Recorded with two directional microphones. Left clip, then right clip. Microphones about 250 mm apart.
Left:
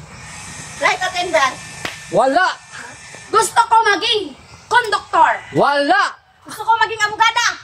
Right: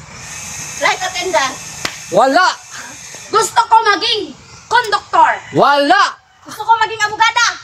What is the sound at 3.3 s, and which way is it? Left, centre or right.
A woman's voice, centre.